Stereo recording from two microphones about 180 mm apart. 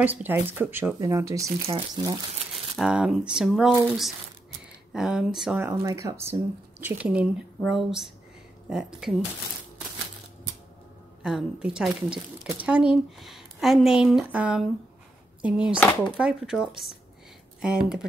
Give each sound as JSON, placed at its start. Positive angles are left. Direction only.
{"t": 0.0, "sound": "speech", "side_deg": -10}
{"t": 1.7, "sound": "speech", "side_deg": -30}
{"t": 2.8, "sound": "speech", "side_deg": -5}
{"t": 5.6, "sound": "speech", "side_deg": -15}
{"t": 11.2, "sound": "speech", "side_deg": -5}